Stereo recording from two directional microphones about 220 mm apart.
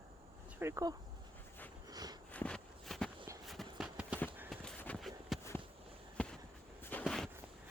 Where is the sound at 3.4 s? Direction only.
Centre (ahead or behind).